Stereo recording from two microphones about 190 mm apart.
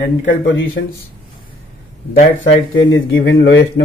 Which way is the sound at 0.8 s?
60° left (ahead or behind).